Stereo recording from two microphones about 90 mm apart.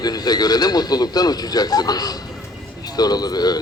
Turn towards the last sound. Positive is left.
turn(degrees=50)  # may be behind; listen again after turning